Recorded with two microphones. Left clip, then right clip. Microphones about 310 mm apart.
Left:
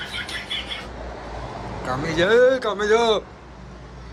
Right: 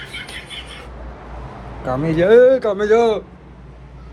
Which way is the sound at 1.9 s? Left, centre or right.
Centre.